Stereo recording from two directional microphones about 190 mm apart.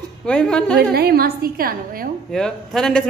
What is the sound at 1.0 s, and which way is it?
A woman's voice, 55° right (ahead or behind).